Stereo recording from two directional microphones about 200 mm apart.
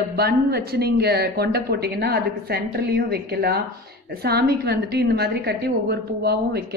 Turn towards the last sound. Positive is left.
turn(degrees=-55)  # may be behind; listen again after turning